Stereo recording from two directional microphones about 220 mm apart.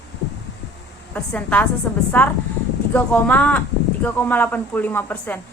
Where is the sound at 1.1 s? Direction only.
5° left (ahead or behind).